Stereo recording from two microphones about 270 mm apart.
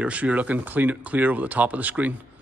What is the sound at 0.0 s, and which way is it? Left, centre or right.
Speech, centre.